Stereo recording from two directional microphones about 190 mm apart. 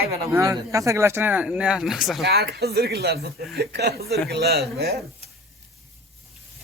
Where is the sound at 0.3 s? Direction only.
15° right (ahead or behind).